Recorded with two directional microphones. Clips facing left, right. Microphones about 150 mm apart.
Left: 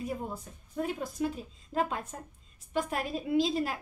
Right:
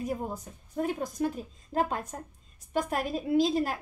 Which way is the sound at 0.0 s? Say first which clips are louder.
Right 3 dB; 40° right (ahead or behind).